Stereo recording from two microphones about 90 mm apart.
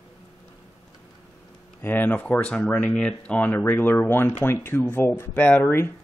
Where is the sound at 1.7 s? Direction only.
20° left (ahead or behind).